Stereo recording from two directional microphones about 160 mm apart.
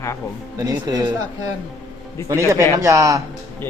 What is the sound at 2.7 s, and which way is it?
Speech, 20° right (ahead or behind).